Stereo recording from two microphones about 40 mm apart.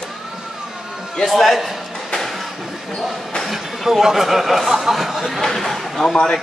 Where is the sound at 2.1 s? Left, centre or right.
Centre.